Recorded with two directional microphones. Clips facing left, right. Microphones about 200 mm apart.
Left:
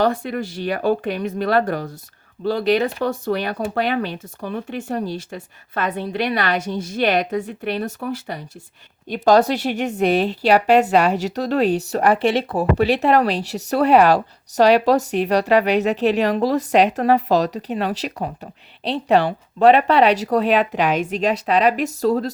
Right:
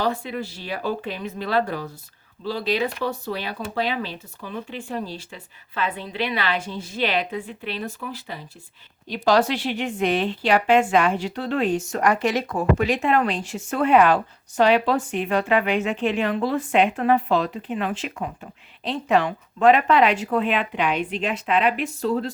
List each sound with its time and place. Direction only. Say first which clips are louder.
0.0 s speech: left 5 dB; 50° left (ahead or behind)
7.7 s speech: left 6 dB; 60° left (ahead or behind)
9.0 s speech: left 4 dB; 50° left (ahead or behind)